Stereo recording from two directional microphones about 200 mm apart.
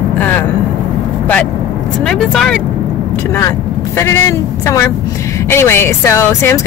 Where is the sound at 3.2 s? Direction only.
15° left (ahead or behind).